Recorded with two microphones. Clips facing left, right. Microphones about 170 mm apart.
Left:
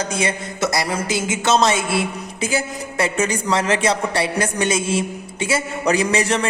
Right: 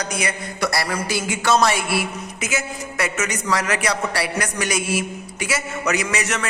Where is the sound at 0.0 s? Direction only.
25° left (ahead or behind).